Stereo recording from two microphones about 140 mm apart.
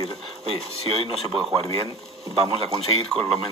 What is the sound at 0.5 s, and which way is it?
Speech, 45° right (ahead or behind).